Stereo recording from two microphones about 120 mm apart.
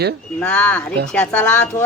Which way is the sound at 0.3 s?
10° left (ahead or behind).